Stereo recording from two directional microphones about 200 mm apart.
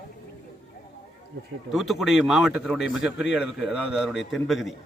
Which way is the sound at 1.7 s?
Centre (ahead or behind).